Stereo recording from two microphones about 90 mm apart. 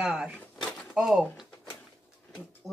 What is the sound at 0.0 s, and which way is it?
Speech, 10° right (ahead or behind).